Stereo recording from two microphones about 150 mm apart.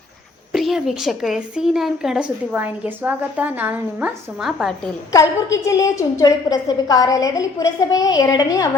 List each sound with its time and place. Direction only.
0.5 s speech: centre (ahead or behind)
5.1 s a woman's voice: 20° left (ahead or behind)